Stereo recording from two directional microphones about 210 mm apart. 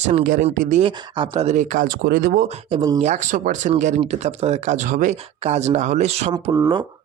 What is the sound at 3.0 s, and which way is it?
Speech, 35° right (ahead or behind).